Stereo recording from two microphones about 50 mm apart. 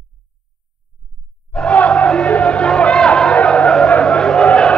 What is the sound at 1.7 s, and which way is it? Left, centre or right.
Music, left.